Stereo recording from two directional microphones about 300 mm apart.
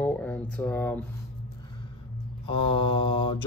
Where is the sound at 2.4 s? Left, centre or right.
Centre.